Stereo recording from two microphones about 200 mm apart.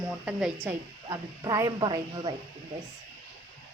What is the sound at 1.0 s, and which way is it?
Speech, 15° right (ahead or behind).